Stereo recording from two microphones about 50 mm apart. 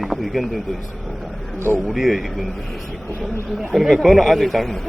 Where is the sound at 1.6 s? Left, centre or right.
Right.